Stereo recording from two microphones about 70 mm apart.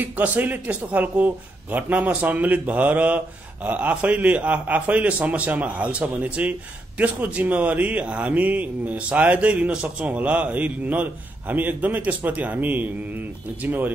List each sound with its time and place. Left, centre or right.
0.0 s speech: right